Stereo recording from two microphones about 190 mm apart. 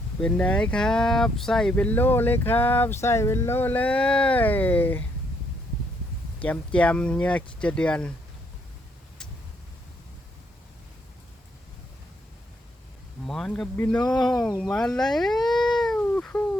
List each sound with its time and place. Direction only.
0.2 s speech: 5° left (ahead or behind)
6.4 s speech: 5° left (ahead or behind)
13.2 s speech: centre (ahead or behind)
14.4 s cat: 5° left (ahead or behind)